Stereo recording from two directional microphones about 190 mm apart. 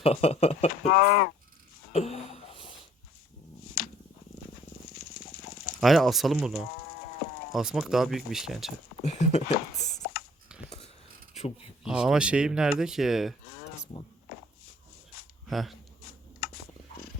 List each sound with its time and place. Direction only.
0.0 s speech: 35° left (ahead or behind)
0.9 s speech: 55° left (ahead or behind)
1.9 s a sound: 35° left (ahead or behind)
3.8 s purr: 50° left (ahead or behind)
5.1 s fowl: 50° left (ahead or behind)
5.8 s speech: centre (ahead or behind)
9.1 s speech: 35° left (ahead or behind)
10.5 s a sound: 5° right (ahead or behind)
11.9 s speech: 5° right (ahead or behind)
15.4 s speech: centre (ahead or behind)
16.4 s a sound: 50° left (ahead or behind)